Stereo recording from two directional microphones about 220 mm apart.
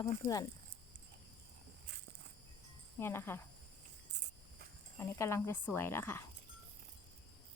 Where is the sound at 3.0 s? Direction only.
10° left (ahead or behind).